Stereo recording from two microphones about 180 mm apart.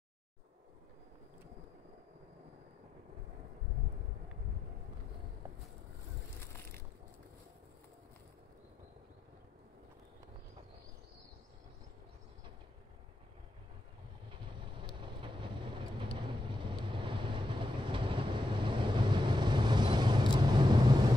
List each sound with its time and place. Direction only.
15.0 s vehicle: 25° right (ahead or behind)